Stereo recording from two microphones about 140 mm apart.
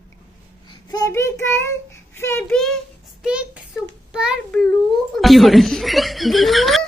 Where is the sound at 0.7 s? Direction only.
30° left (ahead or behind).